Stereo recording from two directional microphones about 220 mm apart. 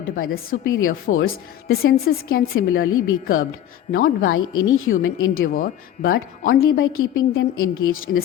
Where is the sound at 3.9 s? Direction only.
40° left (ahead or behind).